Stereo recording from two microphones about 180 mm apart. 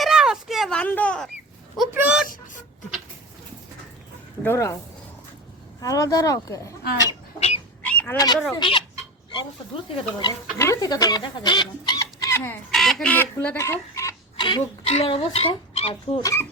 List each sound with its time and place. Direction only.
0.0 s a sound: 5° right (ahead or behind)
1.9 s speech: 10° right (ahead or behind)
2.2 s speech: 50° left (ahead or behind)
4.4 s speech: 15° left (ahead or behind)
5.8 s speech: 20° left (ahead or behind)
7.8 s goose: 10° left (ahead or behind)
8.5 s speech: 25° left (ahead or behind)
12.7 s speech: centre (ahead or behind); by 16.2 s 30° left (ahead or behind)
16.2 s speech: 15° left (ahead or behind)